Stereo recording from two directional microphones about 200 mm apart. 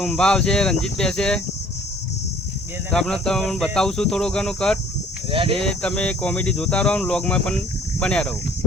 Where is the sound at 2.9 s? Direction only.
5° left (ahead or behind).